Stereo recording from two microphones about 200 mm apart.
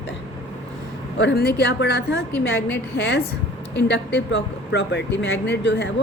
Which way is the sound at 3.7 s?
60° left (ahead or behind).